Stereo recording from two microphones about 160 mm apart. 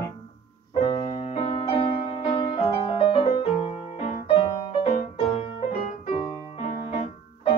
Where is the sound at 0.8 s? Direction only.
35° left (ahead or behind).